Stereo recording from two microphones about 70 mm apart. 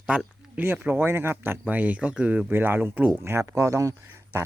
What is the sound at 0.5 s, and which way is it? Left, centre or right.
Speech, right.